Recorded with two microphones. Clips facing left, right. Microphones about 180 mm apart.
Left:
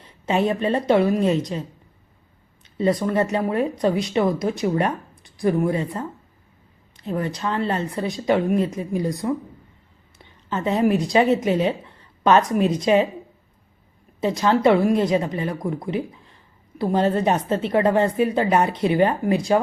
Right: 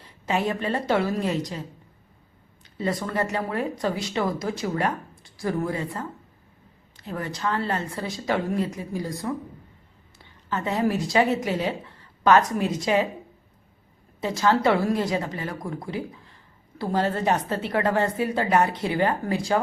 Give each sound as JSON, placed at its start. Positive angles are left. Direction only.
{"t": 0.0, "sound": "speech", "side_deg": 20}
{"t": 2.7, "sound": "a woman's voice", "side_deg": 20}
{"t": 14.2, "sound": "speech", "side_deg": 20}